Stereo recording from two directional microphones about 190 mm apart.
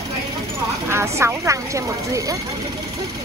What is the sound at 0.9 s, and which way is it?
Speech, 15° right (ahead or behind).